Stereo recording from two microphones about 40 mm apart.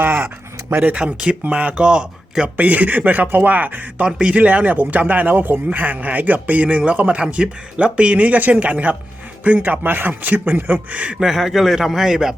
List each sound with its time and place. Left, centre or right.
0.0 s speech: right
1.0 s speech: right
2.6 s speech: right
4.0 s speech: right
9.8 s speech: right
11.2 s a man's voice: centre